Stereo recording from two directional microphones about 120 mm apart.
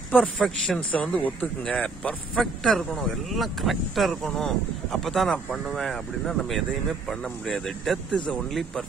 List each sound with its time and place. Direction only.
0.4 s speech: 5° left (ahead or behind)